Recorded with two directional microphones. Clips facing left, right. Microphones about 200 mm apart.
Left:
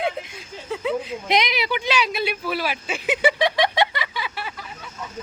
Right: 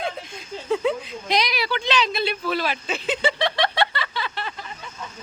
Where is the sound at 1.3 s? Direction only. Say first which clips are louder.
Left 1 dB; 20° left (ahead or behind).